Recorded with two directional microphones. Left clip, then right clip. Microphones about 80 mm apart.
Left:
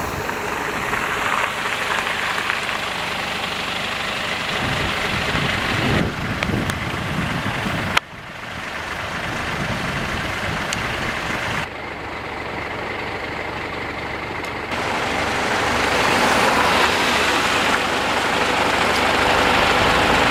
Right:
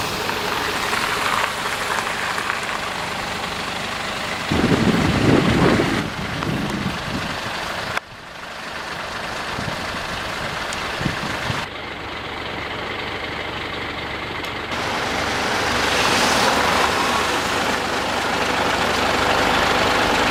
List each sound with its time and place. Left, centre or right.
1.1 s a sound: right
1.9 s a sound: centre
4.4 s vehicle: centre
14.8 s vehicle: right
16.6 s vehicle: left
17.4 s vehicle: centre